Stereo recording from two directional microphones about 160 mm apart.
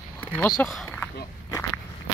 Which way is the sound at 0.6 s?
Centre (ahead or behind).